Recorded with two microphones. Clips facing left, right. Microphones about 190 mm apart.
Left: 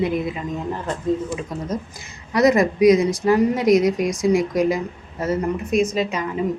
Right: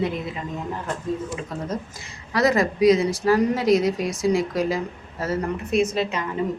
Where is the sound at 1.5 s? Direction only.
15° left (ahead or behind).